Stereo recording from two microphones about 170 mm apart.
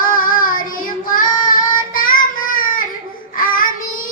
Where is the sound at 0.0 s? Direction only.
55° left (ahead or behind).